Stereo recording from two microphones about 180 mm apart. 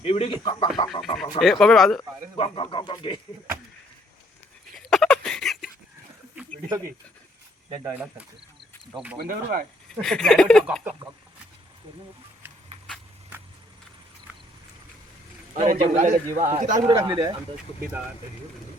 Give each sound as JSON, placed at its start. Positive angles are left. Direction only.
{"t": 0.0, "sound": "speech", "side_deg": 30}
{"t": 1.0, "sound": "speech", "side_deg": 0}
{"t": 2.4, "sound": "speech", "side_deg": 30}
{"t": 4.9, "sound": "a sound", "side_deg": 5}
{"t": 6.7, "sound": "speech", "side_deg": -20}
{"t": 9.1, "sound": "speech", "side_deg": -55}
{"t": 10.0, "sound": "speech", "side_deg": 5}
{"t": 15.6, "sound": "a man's voice", "side_deg": -40}
{"t": 16.8, "sound": "speech", "side_deg": -15}